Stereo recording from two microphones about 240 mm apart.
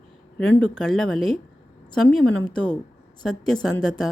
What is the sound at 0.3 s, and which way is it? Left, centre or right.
A woman's voice, centre.